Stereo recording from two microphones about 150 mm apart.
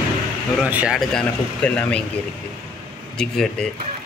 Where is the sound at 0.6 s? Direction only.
10° right (ahead or behind).